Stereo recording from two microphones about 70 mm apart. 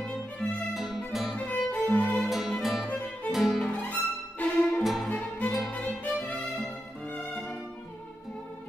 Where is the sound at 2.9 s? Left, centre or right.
Left.